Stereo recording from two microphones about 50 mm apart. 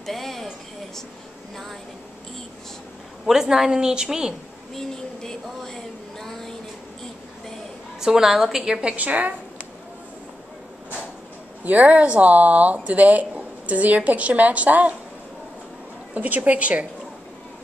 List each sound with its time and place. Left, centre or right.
0.0 s a sound: centre
3.3 s a woman's voice: centre
4.7 s a sound: centre
8.0 s a woman's voice: centre
8.8 s a woman's voice: right
11.6 s a woman's voice: right
16.2 s speech: right